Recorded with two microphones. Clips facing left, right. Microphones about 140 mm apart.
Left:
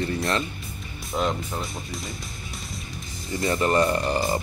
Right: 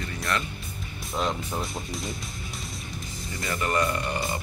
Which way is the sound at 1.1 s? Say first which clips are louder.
Left 3 dB; 5° left (ahead or behind).